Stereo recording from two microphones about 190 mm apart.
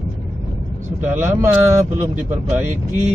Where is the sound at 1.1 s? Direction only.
15° right (ahead or behind).